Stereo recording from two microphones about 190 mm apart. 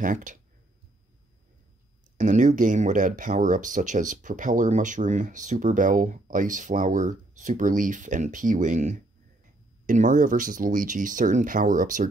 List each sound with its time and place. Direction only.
0.0 s speech: 45° right (ahead or behind)
2.1 s speech: 40° right (ahead or behind)